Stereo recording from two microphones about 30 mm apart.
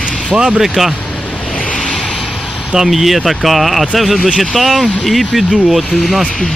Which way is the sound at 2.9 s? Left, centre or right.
Centre.